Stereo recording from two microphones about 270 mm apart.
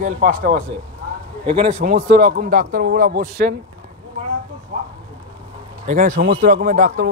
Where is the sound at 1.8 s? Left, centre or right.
Right.